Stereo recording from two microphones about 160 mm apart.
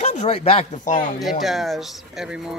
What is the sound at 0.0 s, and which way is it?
Speech, 45° left (ahead or behind).